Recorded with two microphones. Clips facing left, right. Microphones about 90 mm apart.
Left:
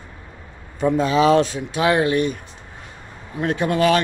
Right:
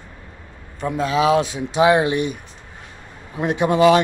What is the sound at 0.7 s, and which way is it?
A man's voice, centre (ahead or behind).